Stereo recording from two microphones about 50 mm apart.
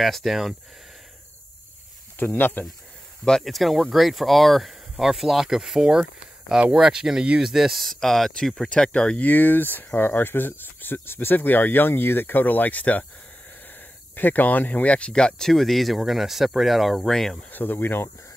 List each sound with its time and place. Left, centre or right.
0.0 s speech: centre
2.1 s speech: left
3.4 s speech: centre
7.8 s speech: centre
8.6 s speech: centre
9.3 s speech: left; by 15.5 s centre
15.5 s speech: centre
17.5 s speech: left